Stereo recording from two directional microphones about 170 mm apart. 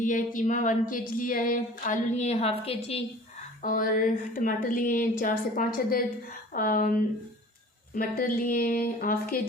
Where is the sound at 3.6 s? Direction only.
55° left (ahead or behind).